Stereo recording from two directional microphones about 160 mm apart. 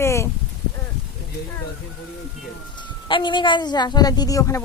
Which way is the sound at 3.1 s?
30° left (ahead or behind).